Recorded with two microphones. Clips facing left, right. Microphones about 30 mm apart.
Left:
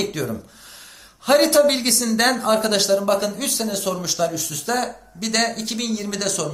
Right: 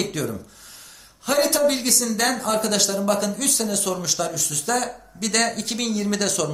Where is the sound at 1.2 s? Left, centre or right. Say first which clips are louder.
Left 5 dB; left.